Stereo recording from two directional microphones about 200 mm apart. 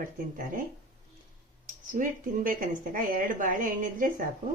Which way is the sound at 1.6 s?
40° right (ahead or behind).